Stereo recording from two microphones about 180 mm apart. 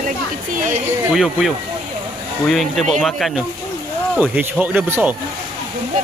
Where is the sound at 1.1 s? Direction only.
Centre (ahead or behind).